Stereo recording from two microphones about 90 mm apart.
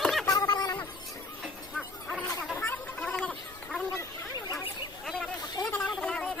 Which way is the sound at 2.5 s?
20° left (ahead or behind).